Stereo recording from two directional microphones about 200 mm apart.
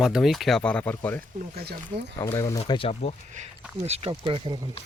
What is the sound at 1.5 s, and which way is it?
Speech, 55° right (ahead or behind).